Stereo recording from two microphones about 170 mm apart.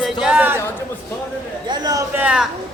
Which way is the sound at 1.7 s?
25° right (ahead or behind).